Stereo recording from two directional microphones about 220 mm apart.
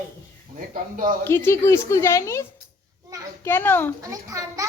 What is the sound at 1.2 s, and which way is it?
A woman's voice, 10° left (ahead or behind).